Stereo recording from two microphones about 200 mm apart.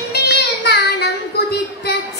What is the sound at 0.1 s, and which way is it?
Child singing, 55° left (ahead or behind).